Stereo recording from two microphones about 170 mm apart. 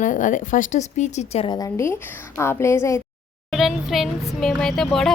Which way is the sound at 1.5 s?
20° left (ahead or behind).